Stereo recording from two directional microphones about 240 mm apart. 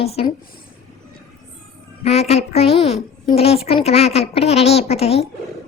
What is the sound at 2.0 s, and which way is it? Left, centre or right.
A woman's voice, left.